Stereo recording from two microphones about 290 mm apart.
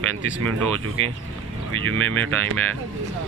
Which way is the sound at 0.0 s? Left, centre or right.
Right.